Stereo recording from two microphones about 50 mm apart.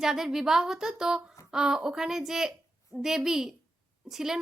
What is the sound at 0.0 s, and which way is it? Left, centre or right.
A woman's voice, centre.